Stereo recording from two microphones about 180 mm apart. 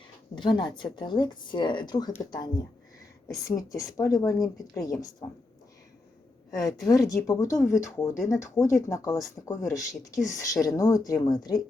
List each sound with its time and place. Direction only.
0.3 s a woman's voice: 25° left (ahead or behind)
6.6 s a woman's voice: 20° left (ahead or behind)